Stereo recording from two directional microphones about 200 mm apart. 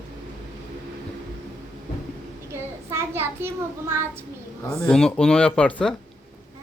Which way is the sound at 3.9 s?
15° right (ahead or behind).